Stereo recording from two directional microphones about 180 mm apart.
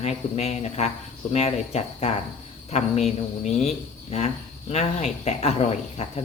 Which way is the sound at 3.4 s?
40° left (ahead or behind).